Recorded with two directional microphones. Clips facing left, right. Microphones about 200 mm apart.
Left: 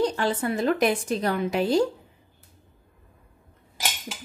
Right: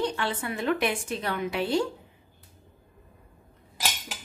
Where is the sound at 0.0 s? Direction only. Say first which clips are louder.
Left 5 dB; 40° left (ahead or behind).